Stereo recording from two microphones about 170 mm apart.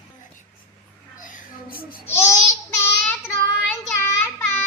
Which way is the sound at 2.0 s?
15° left (ahead or behind).